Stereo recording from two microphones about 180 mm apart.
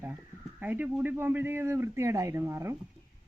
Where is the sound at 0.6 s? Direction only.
10° right (ahead or behind).